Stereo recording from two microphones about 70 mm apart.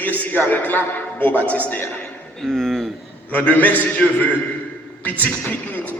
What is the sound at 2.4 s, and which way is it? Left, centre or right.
Speech, centre.